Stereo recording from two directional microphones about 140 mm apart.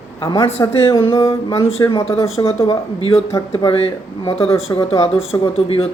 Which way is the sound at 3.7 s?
40° left (ahead or behind).